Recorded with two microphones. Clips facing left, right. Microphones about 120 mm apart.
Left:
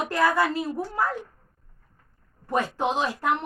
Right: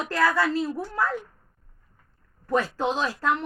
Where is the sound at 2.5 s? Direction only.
15° left (ahead or behind).